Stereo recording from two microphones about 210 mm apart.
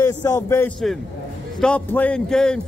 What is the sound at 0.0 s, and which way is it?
A man's voice, 15° left (ahead or behind).